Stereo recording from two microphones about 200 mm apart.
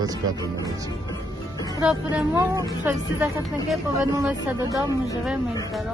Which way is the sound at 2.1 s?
15° right (ahead or behind).